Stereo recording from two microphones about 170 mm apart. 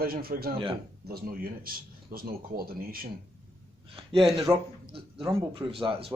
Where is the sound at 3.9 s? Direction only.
35° right (ahead or behind).